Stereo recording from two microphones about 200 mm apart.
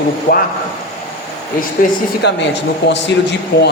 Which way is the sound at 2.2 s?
60° left (ahead or behind).